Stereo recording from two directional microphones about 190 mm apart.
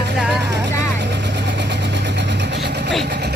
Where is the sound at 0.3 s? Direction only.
65° right (ahead or behind).